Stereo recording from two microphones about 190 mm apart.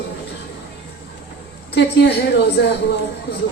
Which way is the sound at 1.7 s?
65° left (ahead or behind).